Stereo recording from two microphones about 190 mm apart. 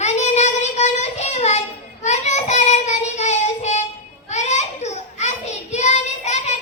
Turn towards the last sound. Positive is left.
turn(degrees=35)  # may be behind; listen again after turning